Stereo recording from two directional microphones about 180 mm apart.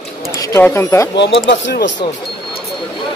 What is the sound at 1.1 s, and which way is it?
Speech, 80° left.